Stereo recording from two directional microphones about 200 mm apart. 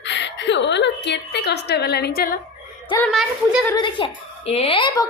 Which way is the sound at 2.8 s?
10° left (ahead or behind).